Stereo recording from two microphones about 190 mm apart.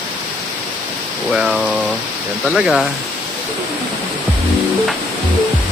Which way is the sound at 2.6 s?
Centre (ahead or behind).